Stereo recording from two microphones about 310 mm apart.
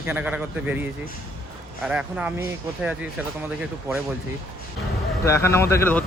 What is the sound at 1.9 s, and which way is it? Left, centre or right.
Speech, centre.